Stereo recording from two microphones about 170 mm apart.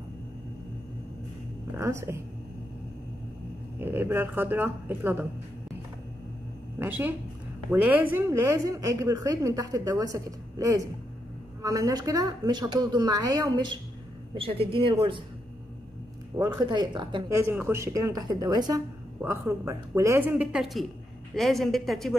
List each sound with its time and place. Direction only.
1.7 s speech: 15° right (ahead or behind)
3.8 s speech: 15° right (ahead or behind)
6.8 s a woman's voice: 10° right (ahead or behind)
14.3 s speech: 35° right (ahead or behind)
16.3 s a woman's voice: 20° right (ahead or behind)
17.5 s a woman's voice: 15° right (ahead or behind)